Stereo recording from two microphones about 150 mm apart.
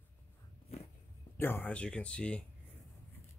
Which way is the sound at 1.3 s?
15° left (ahead or behind).